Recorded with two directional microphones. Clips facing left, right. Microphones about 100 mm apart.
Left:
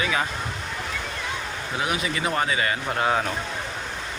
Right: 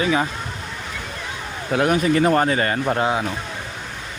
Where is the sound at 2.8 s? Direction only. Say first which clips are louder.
Right 5 dB; 20° right (ahead or behind).